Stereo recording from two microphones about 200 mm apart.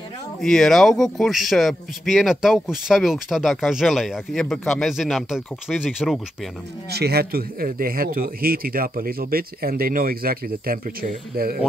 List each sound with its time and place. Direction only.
0.4 s a man's voice: centre (ahead or behind)
6.9 s speech: 55° right (ahead or behind)